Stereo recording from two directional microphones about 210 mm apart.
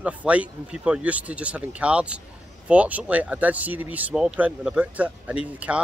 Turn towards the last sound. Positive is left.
turn(degrees=-5)  # may be behind; listen again after turning